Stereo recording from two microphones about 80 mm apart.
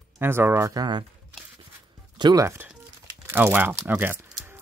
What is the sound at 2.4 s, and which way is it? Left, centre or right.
Speech, right.